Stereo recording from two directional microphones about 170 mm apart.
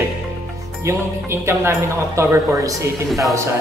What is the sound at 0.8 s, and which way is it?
Speech, 15° right (ahead or behind).